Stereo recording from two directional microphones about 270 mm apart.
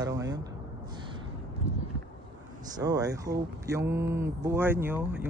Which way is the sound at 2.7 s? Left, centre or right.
Centre.